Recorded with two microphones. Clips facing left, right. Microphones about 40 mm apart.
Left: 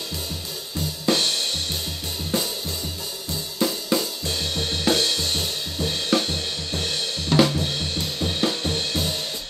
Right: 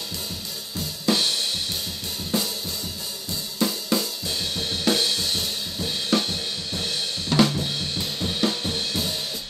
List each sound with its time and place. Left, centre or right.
0.7 s drum kit: centre
3.5 s drum kit: centre